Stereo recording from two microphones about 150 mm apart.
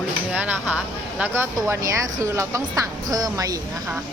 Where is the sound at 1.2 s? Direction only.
15° right (ahead or behind).